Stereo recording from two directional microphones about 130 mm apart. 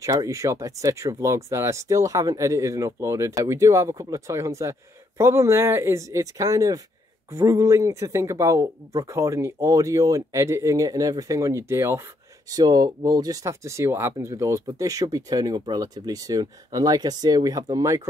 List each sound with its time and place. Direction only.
0.0 s speech: 25° right (ahead or behind)